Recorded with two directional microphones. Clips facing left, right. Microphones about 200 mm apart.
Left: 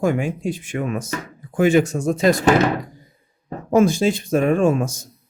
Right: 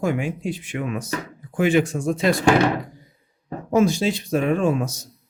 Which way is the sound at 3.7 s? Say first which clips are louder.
Left 3 dB; 50° left (ahead or behind).